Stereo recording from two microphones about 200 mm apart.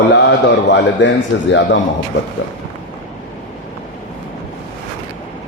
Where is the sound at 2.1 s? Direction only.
45° left (ahead or behind).